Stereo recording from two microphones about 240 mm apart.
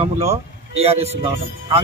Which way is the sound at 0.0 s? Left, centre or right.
Right.